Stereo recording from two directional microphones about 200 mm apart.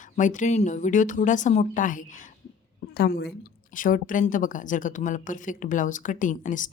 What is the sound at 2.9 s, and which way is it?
Speech, 55° left (ahead or behind).